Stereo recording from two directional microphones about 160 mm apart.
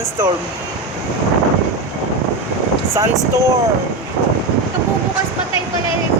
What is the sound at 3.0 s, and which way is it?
Speech, 20° right (ahead or behind).